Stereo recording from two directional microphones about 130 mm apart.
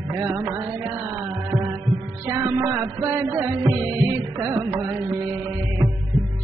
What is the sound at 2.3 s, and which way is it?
Music, 20° right (ahead or behind).